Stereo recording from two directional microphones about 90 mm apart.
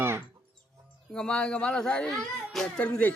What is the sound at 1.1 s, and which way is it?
Speech, 10° left (ahead or behind).